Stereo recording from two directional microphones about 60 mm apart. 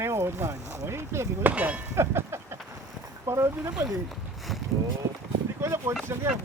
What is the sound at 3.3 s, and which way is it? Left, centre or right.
Speech, right.